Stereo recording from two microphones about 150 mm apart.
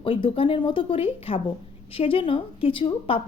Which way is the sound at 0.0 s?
35° left (ahead or behind).